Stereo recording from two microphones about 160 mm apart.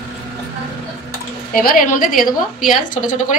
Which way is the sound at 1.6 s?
60° left (ahead or behind).